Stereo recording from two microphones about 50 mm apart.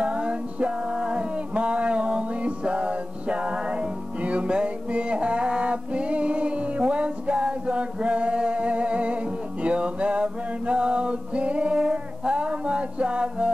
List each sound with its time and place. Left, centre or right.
0.0 s music: right